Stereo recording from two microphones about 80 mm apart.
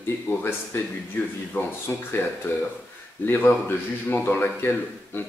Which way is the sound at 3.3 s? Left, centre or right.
Left.